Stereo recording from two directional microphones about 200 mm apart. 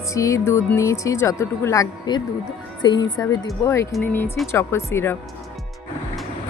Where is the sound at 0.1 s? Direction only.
15° left (ahead or behind).